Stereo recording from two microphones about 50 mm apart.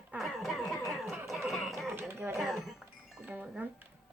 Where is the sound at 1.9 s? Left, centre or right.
Right.